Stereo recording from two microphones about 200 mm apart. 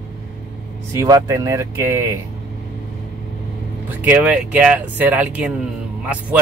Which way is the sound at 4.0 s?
5° right (ahead or behind).